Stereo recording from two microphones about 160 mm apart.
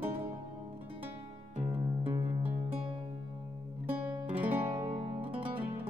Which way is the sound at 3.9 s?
10° right (ahead or behind).